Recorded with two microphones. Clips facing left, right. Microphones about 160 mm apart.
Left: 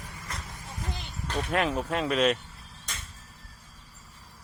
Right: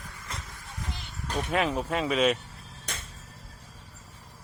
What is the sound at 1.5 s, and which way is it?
Speech, centre (ahead or behind).